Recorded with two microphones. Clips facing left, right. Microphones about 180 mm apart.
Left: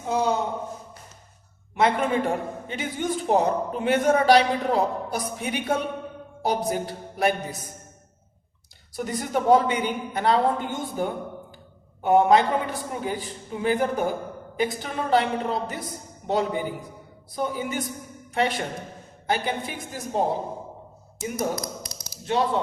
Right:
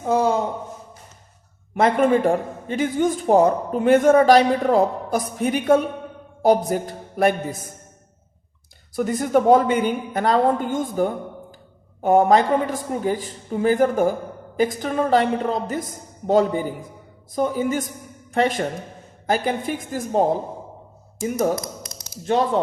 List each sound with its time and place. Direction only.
1.7 s a man's voice: 50° right (ahead or behind)
9.0 s a man's voice: 50° right (ahead or behind)
12.0 s a man's voice: 45° right (ahead or behind)
21.8 s tap: 45° right (ahead or behind)